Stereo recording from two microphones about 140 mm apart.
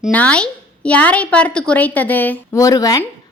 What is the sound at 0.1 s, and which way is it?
A woman's voice, 10° left (ahead or behind).